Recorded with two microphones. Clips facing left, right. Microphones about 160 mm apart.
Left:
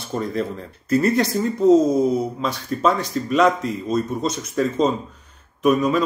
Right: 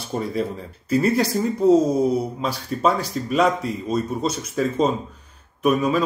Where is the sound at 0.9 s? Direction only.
35° right (ahead or behind).